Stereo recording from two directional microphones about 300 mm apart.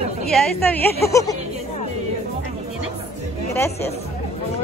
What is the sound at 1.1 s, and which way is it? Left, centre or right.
Speech, centre.